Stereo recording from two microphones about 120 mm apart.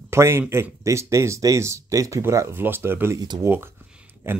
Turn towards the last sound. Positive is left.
turn(degrees=-20)  # may be behind; listen again after turning